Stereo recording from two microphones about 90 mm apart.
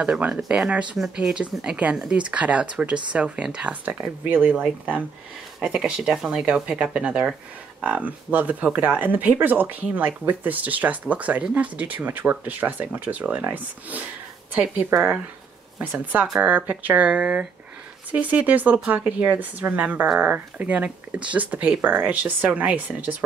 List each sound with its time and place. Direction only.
0.0 s speech: 10° right (ahead or behind)